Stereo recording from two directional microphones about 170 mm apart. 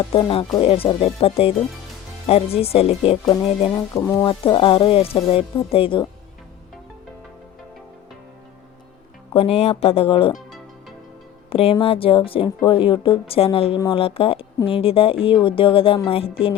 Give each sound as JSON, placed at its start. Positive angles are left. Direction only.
{"t": 0.1, "sound": "a woman's voice", "side_deg": 30}
{"t": 3.8, "sound": "music", "side_deg": 15}
{"t": 9.3, "sound": "a woman's voice", "side_deg": 35}
{"t": 11.4, "sound": "a woman's voice", "side_deg": 35}